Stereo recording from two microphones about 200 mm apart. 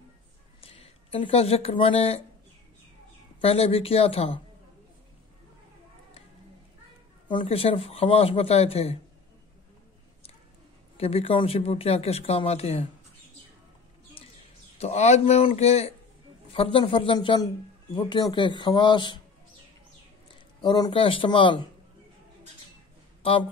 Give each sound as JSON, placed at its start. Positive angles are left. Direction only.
{"t": 0.6, "sound": "speech", "side_deg": 30}
{"t": 3.3, "sound": "speech", "side_deg": 30}
{"t": 7.2, "sound": "speech", "side_deg": 25}
{"t": 11.0, "sound": "speech", "side_deg": 30}
{"t": 14.2, "sound": "a sound", "side_deg": 30}
{"t": 14.8, "sound": "speech", "side_deg": 35}
{"t": 20.6, "sound": "speech", "side_deg": 20}